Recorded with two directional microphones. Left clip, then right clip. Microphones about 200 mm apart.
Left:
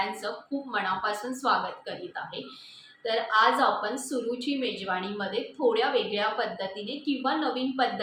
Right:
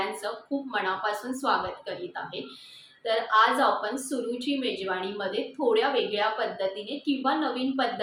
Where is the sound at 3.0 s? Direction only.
5° left (ahead or behind).